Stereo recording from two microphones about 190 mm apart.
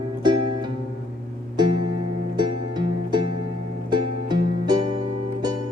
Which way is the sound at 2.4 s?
25° right (ahead or behind).